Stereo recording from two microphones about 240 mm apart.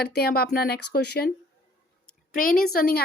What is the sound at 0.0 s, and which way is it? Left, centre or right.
A woman's voice, left.